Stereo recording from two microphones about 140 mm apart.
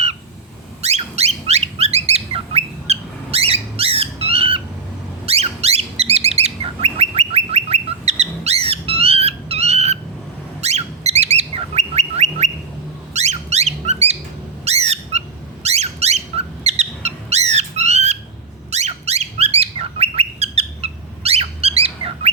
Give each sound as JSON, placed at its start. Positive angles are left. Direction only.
{"t": 0.8, "sound": "bird", "side_deg": -50}
{"t": 13.1, "sound": "squeak", "side_deg": -55}
{"t": 14.6, "sound": "bird", "side_deg": -50}
{"t": 15.6, "sound": "a sound", "side_deg": -50}
{"t": 18.7, "sound": "bird", "side_deg": -50}